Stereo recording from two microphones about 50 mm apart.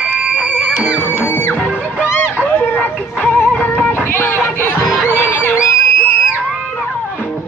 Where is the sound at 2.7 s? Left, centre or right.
Left.